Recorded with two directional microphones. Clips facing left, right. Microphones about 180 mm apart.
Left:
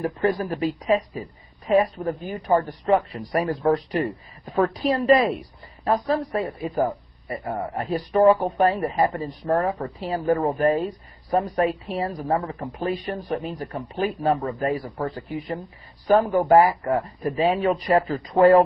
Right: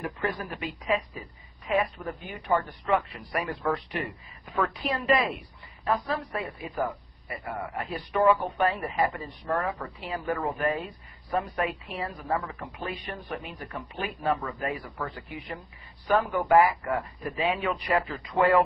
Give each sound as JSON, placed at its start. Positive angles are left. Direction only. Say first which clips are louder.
{"t": 0.0, "sound": "a man's voice", "louder": "left 9 dB", "side_deg": 35}